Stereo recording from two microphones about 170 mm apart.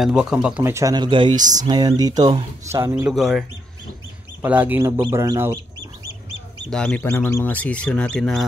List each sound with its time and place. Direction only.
0.0 s speech: 5° right (ahead or behind)
0.7 s speech: 20° right (ahead or behind)
3.1 s speech: centre (ahead or behind)
6.7 s speech: 5° left (ahead or behind)